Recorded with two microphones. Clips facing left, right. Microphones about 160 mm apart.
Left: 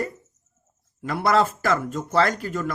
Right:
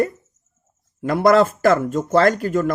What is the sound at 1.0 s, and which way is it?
Speech, 45° right (ahead or behind).